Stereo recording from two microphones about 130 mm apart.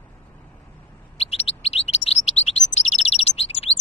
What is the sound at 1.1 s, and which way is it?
Chirp, 50° left (ahead or behind).